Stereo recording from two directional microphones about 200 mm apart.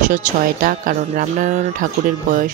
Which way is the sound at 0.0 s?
40° right (ahead or behind).